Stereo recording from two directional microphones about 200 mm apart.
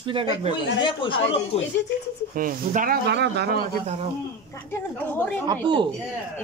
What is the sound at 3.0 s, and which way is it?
Speech, 55° right (ahead or behind).